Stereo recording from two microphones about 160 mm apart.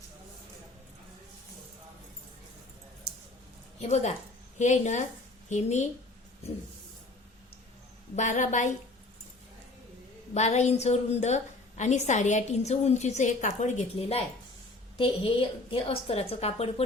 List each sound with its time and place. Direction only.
3.8 s a woman's voice: 45° left (ahead or behind)
8.1 s a woman's voice: 50° left (ahead or behind)
10.3 s a woman's voice: 45° left (ahead or behind)